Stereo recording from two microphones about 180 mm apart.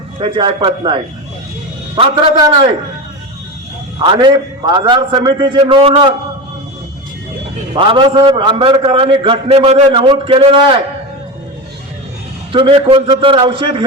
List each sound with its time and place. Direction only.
0.2 s a man's voice: 30° right (ahead or behind)
3.9 s a man's voice: 25° right (ahead or behind)
7.7 s a man's voice: 30° right (ahead or behind)
12.5 s a man's voice: 30° right (ahead or behind)